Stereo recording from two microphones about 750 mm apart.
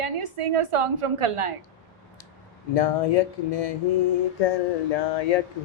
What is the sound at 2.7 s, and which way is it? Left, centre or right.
Speech, left.